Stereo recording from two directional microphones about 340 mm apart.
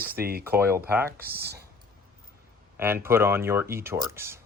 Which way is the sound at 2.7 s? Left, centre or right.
Centre.